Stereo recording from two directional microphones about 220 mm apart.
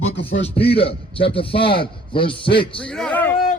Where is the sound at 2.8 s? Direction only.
5° left (ahead or behind).